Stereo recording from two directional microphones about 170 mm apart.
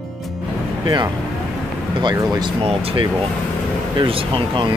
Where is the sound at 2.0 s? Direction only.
25° right (ahead or behind).